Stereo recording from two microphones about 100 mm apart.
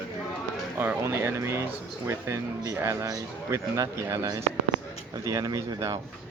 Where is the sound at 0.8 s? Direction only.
25° right (ahead or behind).